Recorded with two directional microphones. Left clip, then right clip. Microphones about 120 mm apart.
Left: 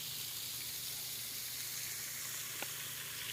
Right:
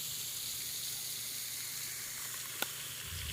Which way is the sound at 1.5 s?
25° right (ahead or behind).